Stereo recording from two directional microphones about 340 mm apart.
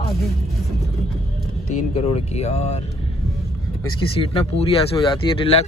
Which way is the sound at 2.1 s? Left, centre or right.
Centre.